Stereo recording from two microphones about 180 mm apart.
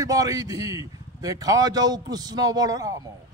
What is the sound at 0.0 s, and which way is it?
A man's voice, 20° right (ahead or behind).